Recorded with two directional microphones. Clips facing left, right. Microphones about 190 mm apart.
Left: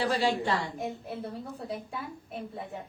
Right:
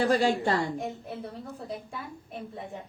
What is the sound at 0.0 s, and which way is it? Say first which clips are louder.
Speech: right 3 dB; 45° right (ahead or behind).